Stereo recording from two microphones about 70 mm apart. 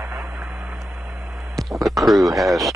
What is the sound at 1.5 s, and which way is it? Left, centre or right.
Speech, centre.